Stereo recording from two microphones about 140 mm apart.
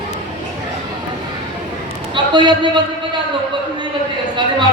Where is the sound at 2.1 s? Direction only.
35° right (ahead or behind).